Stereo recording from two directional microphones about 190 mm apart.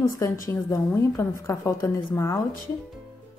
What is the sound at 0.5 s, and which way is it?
A woman's voice, 15° left (ahead or behind).